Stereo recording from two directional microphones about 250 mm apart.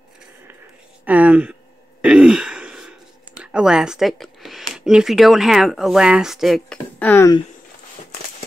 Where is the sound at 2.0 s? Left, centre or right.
Centre.